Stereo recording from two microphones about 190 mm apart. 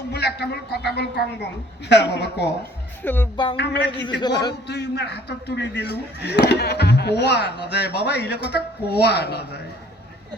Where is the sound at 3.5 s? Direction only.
60° left (ahead or behind).